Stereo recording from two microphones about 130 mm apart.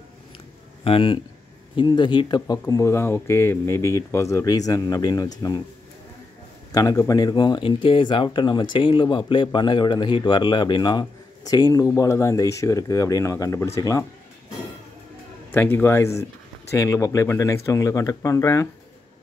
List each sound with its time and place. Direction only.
0.8 s a man's voice: 45° left (ahead or behind)
6.7 s speech: 30° left (ahead or behind)
15.5 s speech: 15° left (ahead or behind)